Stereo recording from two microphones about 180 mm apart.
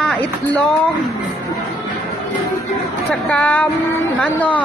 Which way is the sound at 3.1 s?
10° left (ahead or behind).